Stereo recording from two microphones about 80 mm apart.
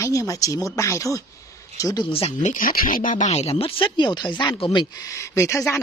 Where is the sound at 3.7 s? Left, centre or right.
Left.